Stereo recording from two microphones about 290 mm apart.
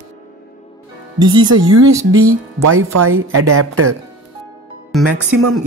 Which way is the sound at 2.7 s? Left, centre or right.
Right.